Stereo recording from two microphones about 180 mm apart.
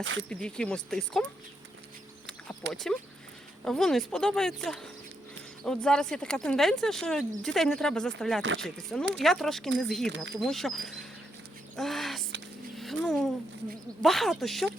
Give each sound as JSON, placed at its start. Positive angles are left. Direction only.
{"t": 0.0, "sound": "speech", "side_deg": -90}
{"t": 0.3, "sound": "speech", "side_deg": 5}
{"t": 2.7, "sound": "speech", "side_deg": 0}
{"t": 8.4, "sound": "speech", "side_deg": -90}
{"t": 8.6, "sound": "speech", "side_deg": 0}
{"t": 11.8, "sound": "a sound", "side_deg": 0}
{"t": 12.7, "sound": "speech", "side_deg": 0}